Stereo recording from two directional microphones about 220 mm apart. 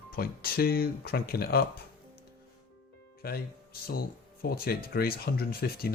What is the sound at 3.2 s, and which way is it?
Speech, 45° left (ahead or behind).